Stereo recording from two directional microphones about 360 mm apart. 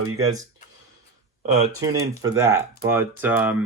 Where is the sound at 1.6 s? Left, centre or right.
Centre.